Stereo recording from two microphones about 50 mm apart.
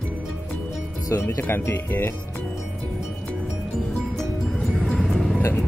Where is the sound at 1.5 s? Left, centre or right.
Left.